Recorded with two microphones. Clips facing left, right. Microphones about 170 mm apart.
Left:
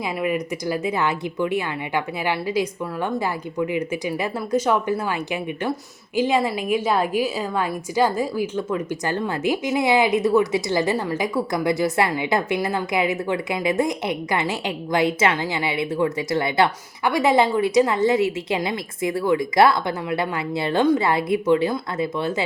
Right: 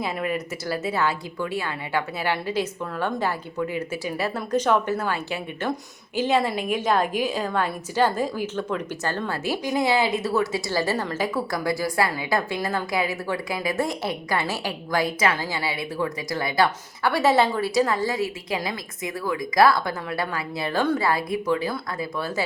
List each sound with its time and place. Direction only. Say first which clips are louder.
0.0 s a woman's voice: left 3 dB; 10° left (ahead or behind)